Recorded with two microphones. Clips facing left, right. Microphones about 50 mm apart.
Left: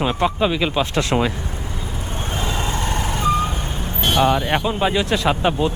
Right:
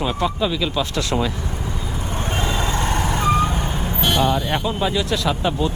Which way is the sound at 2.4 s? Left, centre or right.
Right.